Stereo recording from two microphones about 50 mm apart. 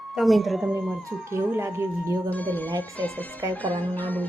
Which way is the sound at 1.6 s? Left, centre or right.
Right.